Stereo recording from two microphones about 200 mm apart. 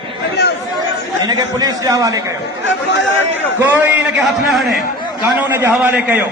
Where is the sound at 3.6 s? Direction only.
10° right (ahead or behind).